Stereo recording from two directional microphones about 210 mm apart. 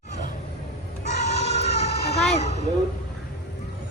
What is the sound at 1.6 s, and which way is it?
Vehicle, 50° left (ahead or behind).